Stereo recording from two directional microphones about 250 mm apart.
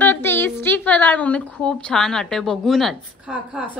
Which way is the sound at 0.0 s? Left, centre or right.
Centre.